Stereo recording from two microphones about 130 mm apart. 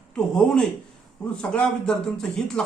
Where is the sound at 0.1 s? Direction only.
5° left (ahead or behind).